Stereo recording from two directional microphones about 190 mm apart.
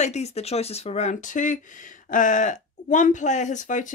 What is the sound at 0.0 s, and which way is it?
Speech, 35° left (ahead or behind).